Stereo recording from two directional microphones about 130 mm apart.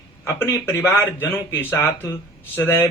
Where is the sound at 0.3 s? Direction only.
20° left (ahead or behind).